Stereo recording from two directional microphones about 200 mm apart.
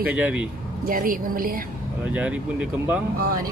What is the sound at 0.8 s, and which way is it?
Speech, 45° right (ahead or behind).